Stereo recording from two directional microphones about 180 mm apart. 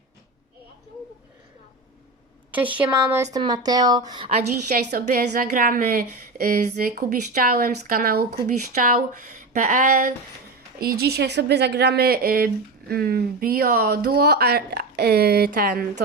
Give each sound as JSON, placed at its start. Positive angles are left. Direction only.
{"t": 2.5, "sound": "a woman's voice", "side_deg": -10}
{"t": 3.3, "sound": "a woman's voice", "side_deg": -25}
{"t": 4.9, "sound": "speech", "side_deg": -55}